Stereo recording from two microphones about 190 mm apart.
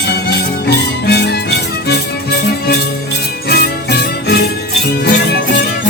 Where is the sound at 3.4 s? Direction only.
55° left (ahead or behind).